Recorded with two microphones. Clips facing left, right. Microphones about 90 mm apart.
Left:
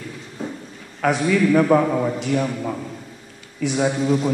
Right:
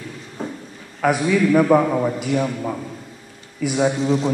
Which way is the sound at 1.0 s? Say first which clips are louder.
Right 1 dB; 5° right (ahead or behind).